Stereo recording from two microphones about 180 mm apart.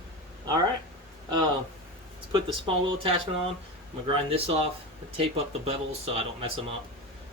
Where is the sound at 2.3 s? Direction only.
30° right (ahead or behind).